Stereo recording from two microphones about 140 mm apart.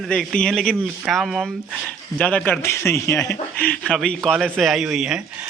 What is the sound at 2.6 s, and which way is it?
Speech, 15° left (ahead or behind).